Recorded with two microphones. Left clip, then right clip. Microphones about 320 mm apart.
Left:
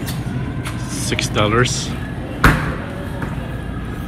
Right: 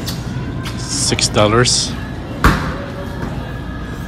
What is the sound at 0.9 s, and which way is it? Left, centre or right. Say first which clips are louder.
Speech: right 5 dB; centre.